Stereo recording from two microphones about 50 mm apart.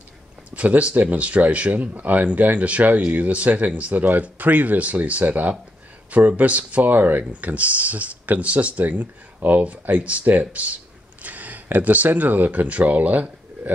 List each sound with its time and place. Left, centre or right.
0.5 s speech: right